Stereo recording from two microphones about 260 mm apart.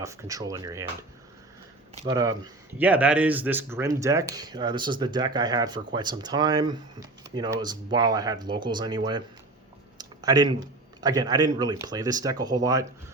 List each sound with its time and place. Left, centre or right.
0.0 s speech: centre
2.0 s speech: centre
10.2 s speech: centre